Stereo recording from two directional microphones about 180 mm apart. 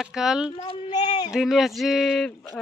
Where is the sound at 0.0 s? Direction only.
5° right (ahead or behind).